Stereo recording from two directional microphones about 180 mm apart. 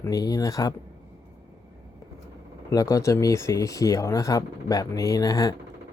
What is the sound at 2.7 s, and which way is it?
Speech, 20° left (ahead or behind).